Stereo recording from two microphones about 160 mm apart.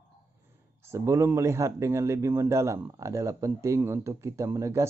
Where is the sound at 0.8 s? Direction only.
15° right (ahead or behind).